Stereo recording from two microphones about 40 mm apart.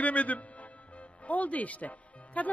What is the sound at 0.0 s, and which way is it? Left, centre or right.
Music, left.